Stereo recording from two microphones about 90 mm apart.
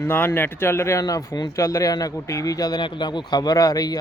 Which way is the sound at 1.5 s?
40° left (ahead or behind).